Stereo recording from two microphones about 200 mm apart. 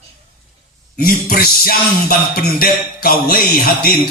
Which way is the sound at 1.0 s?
50° left (ahead or behind).